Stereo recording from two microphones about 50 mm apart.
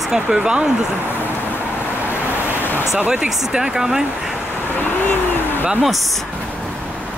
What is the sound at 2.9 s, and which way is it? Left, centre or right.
Speech, centre.